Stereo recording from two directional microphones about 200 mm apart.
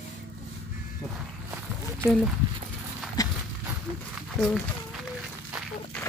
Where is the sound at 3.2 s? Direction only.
20° left (ahead or behind).